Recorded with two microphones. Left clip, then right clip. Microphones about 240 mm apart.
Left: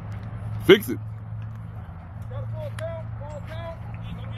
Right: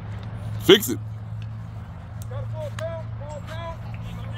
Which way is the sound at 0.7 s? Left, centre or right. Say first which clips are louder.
Right 1 dB; centre.